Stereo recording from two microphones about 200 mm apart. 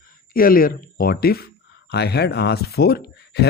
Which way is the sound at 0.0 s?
45° left (ahead or behind).